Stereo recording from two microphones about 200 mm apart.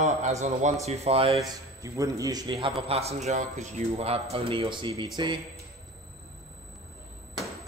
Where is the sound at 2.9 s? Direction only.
30° right (ahead or behind).